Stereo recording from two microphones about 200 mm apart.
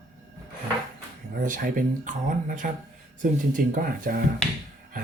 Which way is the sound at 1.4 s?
40° right (ahead or behind).